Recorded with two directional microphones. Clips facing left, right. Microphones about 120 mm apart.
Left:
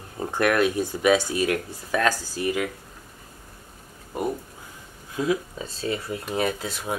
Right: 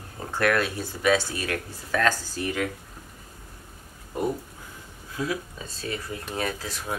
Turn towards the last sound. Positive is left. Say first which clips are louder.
# left 3 dB
turn(degrees=20)  # may be behind; listen again after turning